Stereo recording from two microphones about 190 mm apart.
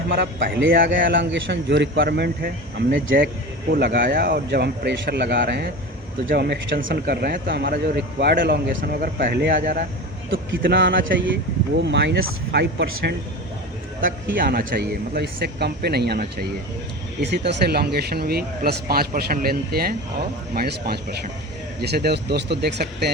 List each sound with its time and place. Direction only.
0.1 s speech: 60° right (ahead or behind)
0.9 s speech: 75° right (ahead or behind)
7.1 s speech: 55° right (ahead or behind)
10.6 s speech: 65° right (ahead or behind)
11.0 s speech: 75° right (ahead or behind); by 13.1 s 60° right (ahead or behind)
14.3 s speech: 50° right (ahead or behind)